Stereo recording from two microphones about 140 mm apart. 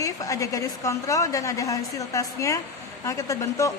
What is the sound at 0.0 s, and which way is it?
A woman's voice, 25° left (ahead or behind).